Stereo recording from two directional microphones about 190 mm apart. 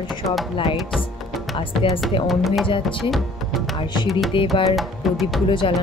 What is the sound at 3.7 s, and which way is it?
Music, 25° left (ahead or behind).